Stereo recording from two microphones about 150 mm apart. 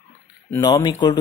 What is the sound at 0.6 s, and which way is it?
Speech, 30° left (ahead or behind).